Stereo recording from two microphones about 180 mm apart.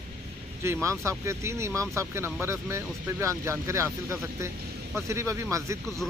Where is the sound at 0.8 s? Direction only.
15° right (ahead or behind).